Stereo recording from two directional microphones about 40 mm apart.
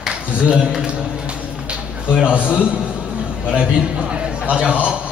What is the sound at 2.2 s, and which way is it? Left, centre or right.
A man's voice, right.